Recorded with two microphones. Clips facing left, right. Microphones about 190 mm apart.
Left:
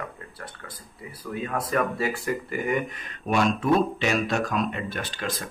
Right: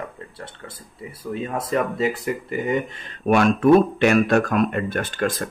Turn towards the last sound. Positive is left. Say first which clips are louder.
# right 8 dB
turn(degrees=-50)  # may be behind; listen again after turning